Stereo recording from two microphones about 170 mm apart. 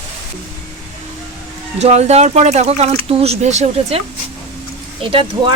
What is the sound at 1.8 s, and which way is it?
Speech, 40° right (ahead or behind).